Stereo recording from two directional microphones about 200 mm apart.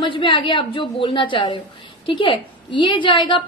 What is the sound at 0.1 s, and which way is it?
A woman's voice, 25° left (ahead or behind).